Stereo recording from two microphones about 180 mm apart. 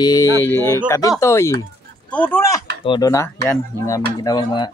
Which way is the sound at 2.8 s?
25° left (ahead or behind).